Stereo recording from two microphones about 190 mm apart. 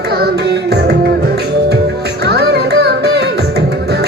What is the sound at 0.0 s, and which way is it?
Music, 60° right (ahead or behind).